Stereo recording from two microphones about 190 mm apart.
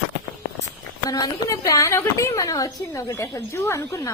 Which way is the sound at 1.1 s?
20° left (ahead or behind).